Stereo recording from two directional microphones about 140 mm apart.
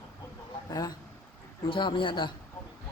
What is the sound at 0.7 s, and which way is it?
A man's voice, 25° left (ahead or behind).